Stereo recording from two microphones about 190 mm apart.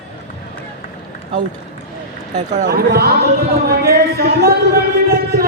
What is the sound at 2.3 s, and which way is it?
Speech, 40° right (ahead or behind).